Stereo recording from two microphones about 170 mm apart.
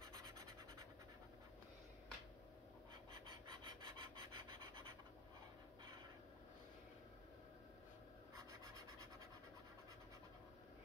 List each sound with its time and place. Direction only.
0.1 s scratch: 20° right (ahead or behind)
3.5 s rub: 30° right (ahead or behind)
8.4 s scratch: 20° right (ahead or behind)